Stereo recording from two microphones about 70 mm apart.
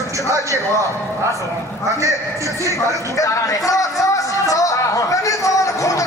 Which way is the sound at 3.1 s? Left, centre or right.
Left.